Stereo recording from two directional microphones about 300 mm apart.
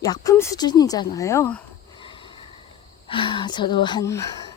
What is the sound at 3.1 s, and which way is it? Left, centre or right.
Speech, centre.